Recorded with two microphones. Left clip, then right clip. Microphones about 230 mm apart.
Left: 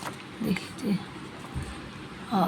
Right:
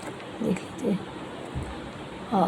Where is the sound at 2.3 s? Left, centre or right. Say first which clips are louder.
Right 3 dB; left.